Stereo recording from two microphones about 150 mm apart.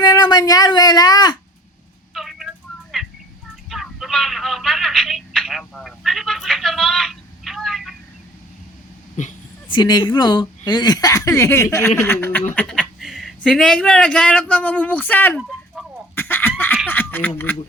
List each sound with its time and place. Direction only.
0.0 s speech: 25° left (ahead or behind)
2.1 s a sound: centre (ahead or behind)
3.7 s telephone: centre (ahead or behind)
9.2 s speech: 55° left (ahead or behind)
9.6 s speech: 30° left (ahead or behind); by 15.4 s 10° left (ahead or behind)
16.1 s chicken: 15° left (ahead or behind)
16.9 s speech: 15° left (ahead or behind)